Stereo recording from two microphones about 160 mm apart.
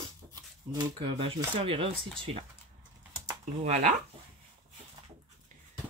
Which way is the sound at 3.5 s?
50° right (ahead or behind).